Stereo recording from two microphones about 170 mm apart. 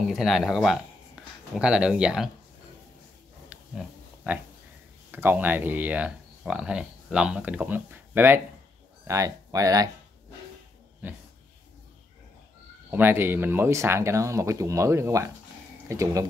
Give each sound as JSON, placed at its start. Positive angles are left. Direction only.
{"t": 0.0, "sound": "speech", "side_deg": 0}
{"t": 3.4, "sound": "pig", "side_deg": -5}
{"t": 5.1, "sound": "speech", "side_deg": -10}
{"t": 12.9, "sound": "speech", "side_deg": -15}